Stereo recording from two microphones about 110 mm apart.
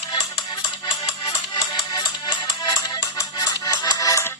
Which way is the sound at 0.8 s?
45° left (ahead or behind).